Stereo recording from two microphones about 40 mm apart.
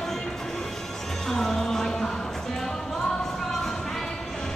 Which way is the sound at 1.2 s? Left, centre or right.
Centre.